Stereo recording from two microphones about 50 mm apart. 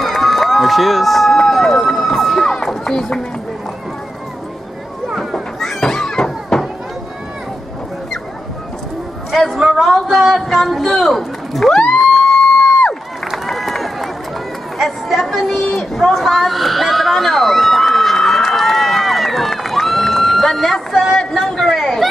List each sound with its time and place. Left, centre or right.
0.0 s run: centre
5.0 s children playing: centre
5.9 s chop: centre
9.8 s a sound: centre
13.5 s run: centre
14.8 s a sound: centre